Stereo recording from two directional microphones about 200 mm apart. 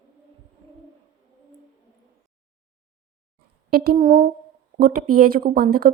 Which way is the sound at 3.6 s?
50° right (ahead or behind).